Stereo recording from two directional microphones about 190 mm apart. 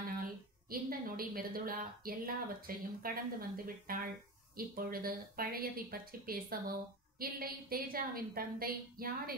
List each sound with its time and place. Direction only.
0.2 s a woman's voice: 50° right (ahead or behind)